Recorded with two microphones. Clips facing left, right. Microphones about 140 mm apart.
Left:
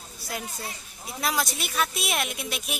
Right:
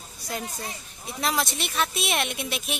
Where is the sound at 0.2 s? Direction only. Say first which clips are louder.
Right 2 dB; 5° left (ahead or behind).